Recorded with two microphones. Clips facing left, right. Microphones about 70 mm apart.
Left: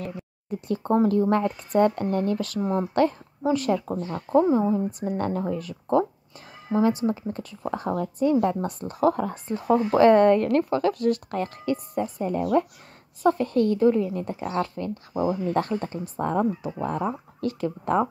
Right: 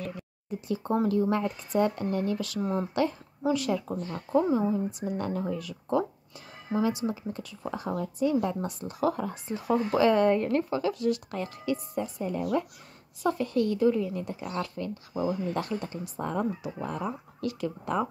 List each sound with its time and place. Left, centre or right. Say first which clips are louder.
0.5 s a woman's voice: left 5 dB; left
4.5 s a woman's voice: left 4 dB; left
10.3 s a woman's voice: left 5 dB; left